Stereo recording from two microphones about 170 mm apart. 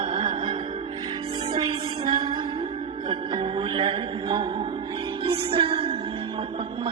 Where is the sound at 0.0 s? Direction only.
30° right (ahead or behind).